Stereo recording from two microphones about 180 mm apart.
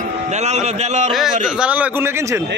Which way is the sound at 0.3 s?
40° right (ahead or behind).